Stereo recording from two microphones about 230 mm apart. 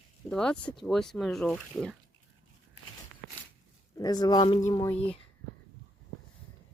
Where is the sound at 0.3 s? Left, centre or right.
Centre.